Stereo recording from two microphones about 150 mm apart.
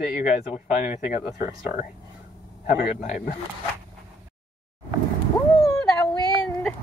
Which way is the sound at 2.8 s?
50° left (ahead or behind).